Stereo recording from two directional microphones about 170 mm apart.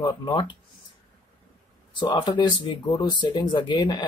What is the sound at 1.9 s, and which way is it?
Speech, 30° left (ahead or behind).